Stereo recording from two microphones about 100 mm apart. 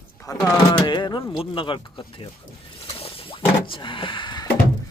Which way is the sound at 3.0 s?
65° left (ahead or behind).